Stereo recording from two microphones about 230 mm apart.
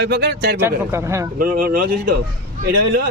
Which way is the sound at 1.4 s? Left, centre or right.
Right.